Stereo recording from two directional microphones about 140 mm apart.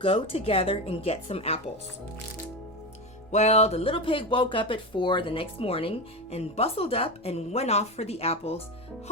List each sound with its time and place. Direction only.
0.0 s speech: 40° left (ahead or behind)
3.3 s speech: 50° left (ahead or behind)